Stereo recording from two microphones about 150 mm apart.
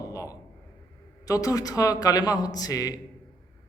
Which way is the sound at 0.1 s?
20° left (ahead or behind).